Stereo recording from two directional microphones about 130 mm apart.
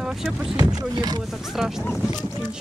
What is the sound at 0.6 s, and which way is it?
Speech, 30° right (ahead or behind).